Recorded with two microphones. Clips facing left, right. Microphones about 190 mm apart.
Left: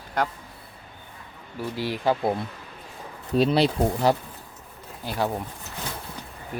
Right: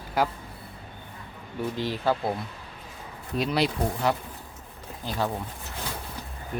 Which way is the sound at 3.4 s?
30° left (ahead or behind).